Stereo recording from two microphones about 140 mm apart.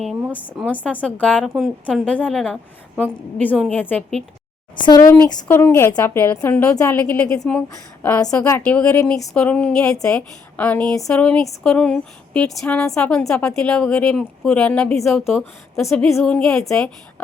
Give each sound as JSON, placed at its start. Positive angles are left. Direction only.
{"t": 0.3, "sound": "speech", "side_deg": 10}
{"t": 1.4, "sound": "speech", "side_deg": -5}
{"t": 4.8, "sound": "speech", "side_deg": 30}
{"t": 5.5, "sound": "speech", "side_deg": 20}